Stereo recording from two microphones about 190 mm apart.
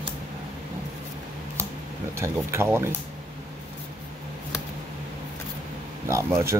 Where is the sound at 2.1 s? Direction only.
15° right (ahead or behind).